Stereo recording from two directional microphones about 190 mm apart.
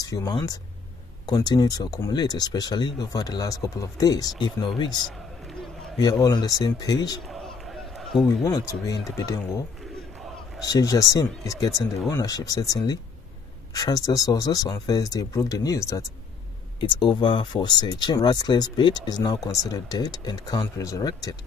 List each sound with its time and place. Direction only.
0.0 s speech: 20° left (ahead or behind)
6.2 s speech: 20° left (ahead or behind)
7.2 s run: centre (ahead or behind)
8.5 s speech: 20° left (ahead or behind)
10.6 s speech: 20° left (ahead or behind)